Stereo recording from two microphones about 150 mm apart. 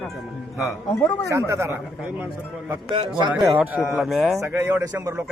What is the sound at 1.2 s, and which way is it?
Speech, 20° right (ahead or behind).